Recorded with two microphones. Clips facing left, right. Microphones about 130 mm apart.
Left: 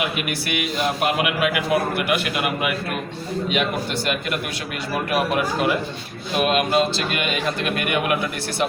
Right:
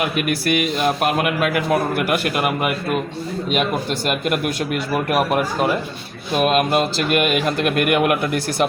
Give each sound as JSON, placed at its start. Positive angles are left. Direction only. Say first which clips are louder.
{"t": 0.0, "sound": "a man's voice", "louder": "right 5 dB", "side_deg": -45}
{"t": 6.4, "sound": "a man's voice", "louder": "right 2 dB", "side_deg": -45}